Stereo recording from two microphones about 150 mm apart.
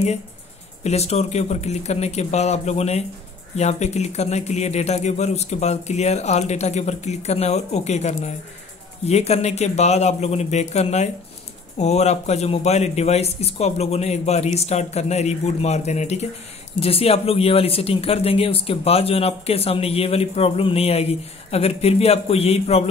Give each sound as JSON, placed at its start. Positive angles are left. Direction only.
{"t": 0.8, "sound": "speech", "side_deg": 45}